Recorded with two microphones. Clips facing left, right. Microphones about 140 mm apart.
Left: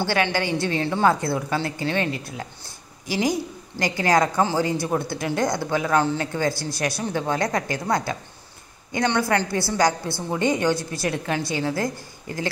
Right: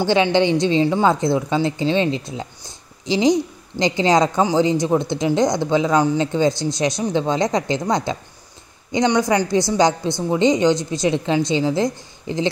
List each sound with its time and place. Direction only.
0.0 s a woman's voice: 20° right (ahead or behind)